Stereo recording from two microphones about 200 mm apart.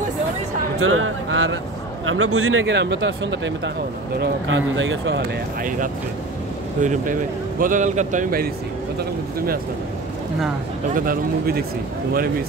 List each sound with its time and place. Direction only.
0.7 s speech: 90° right; by 5.2 s 65° right (ahead or behind)
6.8 s speech: 40° right (ahead or behind)
11.0 s speech: 45° right (ahead or behind)